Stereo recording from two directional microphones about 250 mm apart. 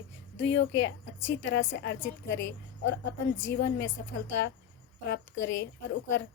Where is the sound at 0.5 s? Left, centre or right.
Left.